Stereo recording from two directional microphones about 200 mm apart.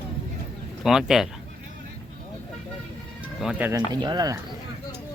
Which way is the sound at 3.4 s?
5° right (ahead or behind).